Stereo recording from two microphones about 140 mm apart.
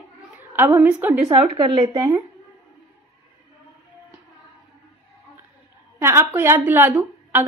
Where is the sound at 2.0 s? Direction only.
20° right (ahead or behind).